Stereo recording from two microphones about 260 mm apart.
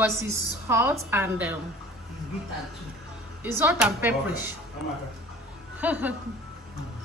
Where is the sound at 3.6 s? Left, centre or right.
Centre.